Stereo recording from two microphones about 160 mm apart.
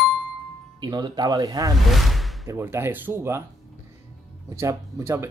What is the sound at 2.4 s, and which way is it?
Speech, 15° right (ahead or behind).